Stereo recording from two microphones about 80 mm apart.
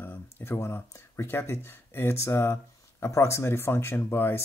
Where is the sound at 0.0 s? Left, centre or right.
Left.